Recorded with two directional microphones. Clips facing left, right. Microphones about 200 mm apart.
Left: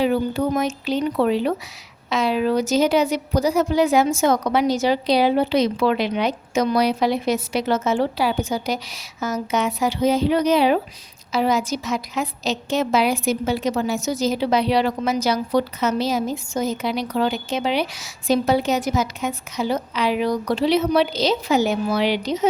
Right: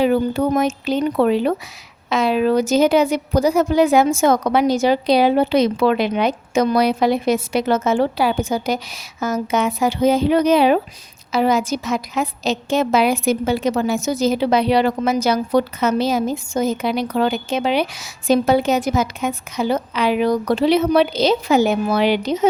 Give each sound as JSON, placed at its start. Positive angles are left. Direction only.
{"t": 0.0, "sound": "a woman's voice", "side_deg": -55}